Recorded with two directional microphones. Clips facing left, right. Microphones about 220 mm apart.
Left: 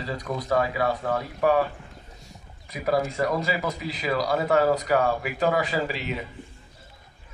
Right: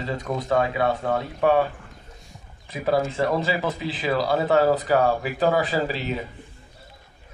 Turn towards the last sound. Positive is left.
turn(degrees=-35)  # may be behind; listen again after turning